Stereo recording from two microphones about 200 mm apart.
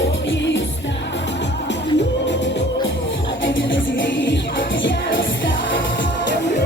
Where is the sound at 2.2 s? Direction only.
60° left (ahead or behind).